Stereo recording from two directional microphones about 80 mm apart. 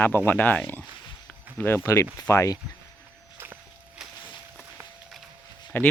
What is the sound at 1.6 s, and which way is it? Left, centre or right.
Speech, left.